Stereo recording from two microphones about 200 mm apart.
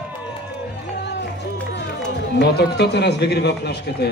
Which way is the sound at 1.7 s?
60° left (ahead or behind).